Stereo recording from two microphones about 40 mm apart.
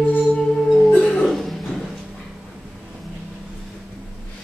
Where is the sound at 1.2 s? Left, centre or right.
Centre.